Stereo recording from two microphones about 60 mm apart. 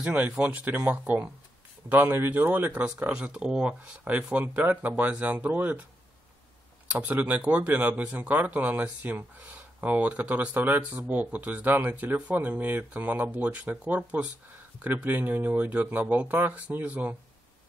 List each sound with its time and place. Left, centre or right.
0.0 s speech: right
2.0 s speech: right
2.3 s speech: right
6.9 s speech: right